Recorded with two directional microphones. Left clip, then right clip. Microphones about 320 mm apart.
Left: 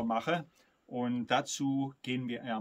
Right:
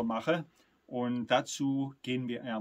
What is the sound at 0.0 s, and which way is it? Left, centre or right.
Speech, centre.